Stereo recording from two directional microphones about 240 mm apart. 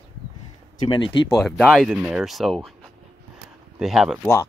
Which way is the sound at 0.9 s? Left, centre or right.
Left.